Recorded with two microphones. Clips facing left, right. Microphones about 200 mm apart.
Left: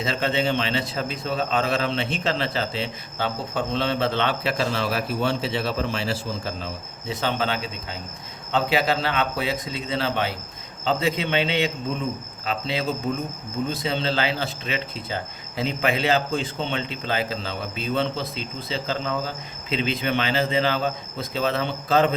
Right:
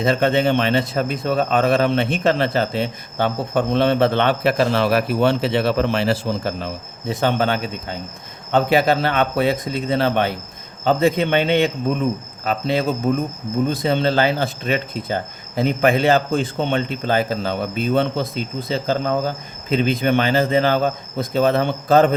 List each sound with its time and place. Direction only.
0.0 s speech: 50° right (ahead or behind)
7.1 s speech: 50° right (ahead or behind)